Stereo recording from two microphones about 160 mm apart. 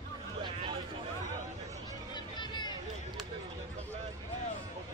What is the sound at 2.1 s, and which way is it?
Hubbub, 25° left (ahead or behind).